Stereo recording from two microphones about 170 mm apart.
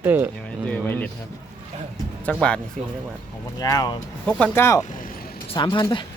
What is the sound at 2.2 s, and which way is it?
Speech, 5° left (ahead or behind).